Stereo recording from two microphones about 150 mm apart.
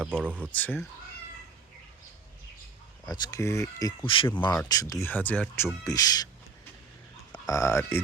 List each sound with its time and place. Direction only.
0.0 s speech: 10° right (ahead or behind)
0.5 s speech: 10° left (ahead or behind)
3.1 s speech: 25° left (ahead or behind)
4.0 s speech: 35° left (ahead or behind)
4.7 s speech: 25° left (ahead or behind)
5.8 s speech: 25° left (ahead or behind)
7.3 s speech: 25° left (ahead or behind)